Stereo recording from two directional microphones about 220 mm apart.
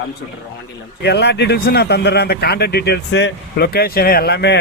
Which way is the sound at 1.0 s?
50° left (ahead or behind).